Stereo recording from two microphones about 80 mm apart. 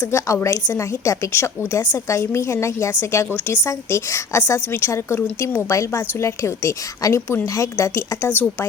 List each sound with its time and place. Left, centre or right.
0.0 s a woman's voice: left